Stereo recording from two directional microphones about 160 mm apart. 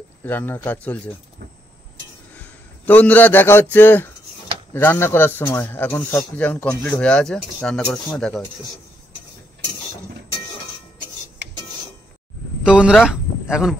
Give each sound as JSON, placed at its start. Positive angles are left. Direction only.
{"t": 0.2, "sound": "speech", "side_deg": 10}
{"t": 2.3, "sound": "a sound", "side_deg": 10}
{"t": 3.7, "sound": "speech", "side_deg": 10}
{"t": 11.4, "sound": "filing", "side_deg": -90}
{"t": 12.6, "sound": "speech", "side_deg": -5}